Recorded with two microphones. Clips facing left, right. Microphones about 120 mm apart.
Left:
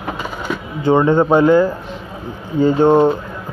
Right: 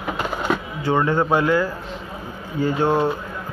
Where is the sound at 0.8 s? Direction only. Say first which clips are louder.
Left 8 dB; 20° left (ahead or behind).